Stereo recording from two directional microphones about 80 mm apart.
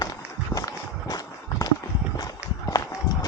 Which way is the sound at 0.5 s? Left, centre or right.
Left.